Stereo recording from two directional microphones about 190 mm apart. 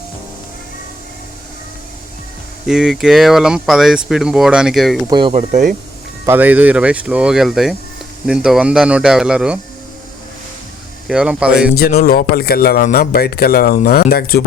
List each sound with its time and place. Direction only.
2.6 s speech: 5° right (ahead or behind)
5.0 s speech: 25° right (ahead or behind)
5.3 s speech: 40° right (ahead or behind)
6.2 s speech: 10° right (ahead or behind)
11.1 s speech: 5° right (ahead or behind)
11.7 s a man's voice: 55° left (ahead or behind)